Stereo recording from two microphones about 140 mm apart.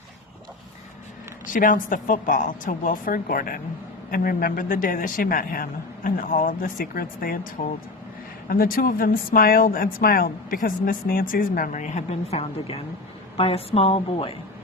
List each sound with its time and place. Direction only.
1.5 s a woman's voice: 75° left (ahead or behind); by 7.3 s 90° left
7.6 s a woman's voice: 70° left (ahead or behind)
8.4 s speech: 90° left; by 12.4 s 60° left (ahead or behind)
12.4 s a woman's voice: 40° left (ahead or behind)